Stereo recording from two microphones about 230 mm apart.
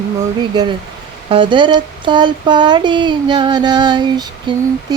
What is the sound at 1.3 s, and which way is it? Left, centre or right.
Speech, right.